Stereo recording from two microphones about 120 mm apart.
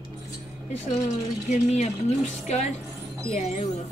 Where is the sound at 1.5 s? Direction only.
80° left.